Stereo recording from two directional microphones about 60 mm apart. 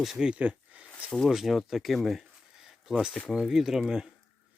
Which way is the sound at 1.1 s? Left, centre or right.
Centre.